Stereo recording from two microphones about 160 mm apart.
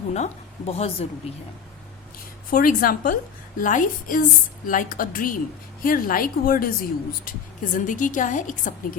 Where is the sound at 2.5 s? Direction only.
65° left (ahead or behind).